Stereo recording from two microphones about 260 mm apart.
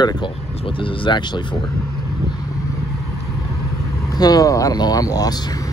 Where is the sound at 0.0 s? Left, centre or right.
Centre.